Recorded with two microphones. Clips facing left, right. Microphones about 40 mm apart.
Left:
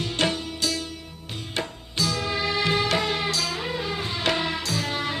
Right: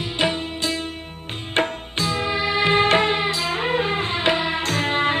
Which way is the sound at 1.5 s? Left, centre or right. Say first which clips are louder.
Right 7 dB; right.